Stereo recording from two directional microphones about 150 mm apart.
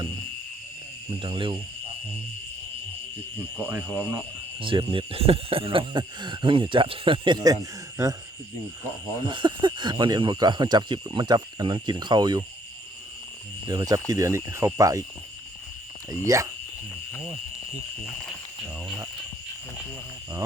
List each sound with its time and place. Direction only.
1.2 s speech: 35° right (ahead or behind)
3.6 s speech: 15° right (ahead or behind)
4.6 s speech: 35° right (ahead or behind)
9.2 s speech: 30° right (ahead or behind)
13.7 s speech: 25° right (ahead or behind)
16.2 s speech: 20° right (ahead or behind)